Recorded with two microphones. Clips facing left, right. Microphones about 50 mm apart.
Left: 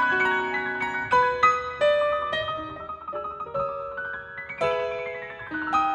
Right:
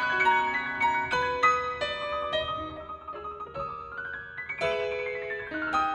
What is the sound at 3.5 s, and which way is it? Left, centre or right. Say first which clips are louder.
Piano: left 9 dB; left.